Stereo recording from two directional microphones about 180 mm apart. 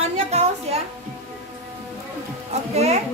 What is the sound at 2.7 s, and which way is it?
Speech, 35° right (ahead or behind).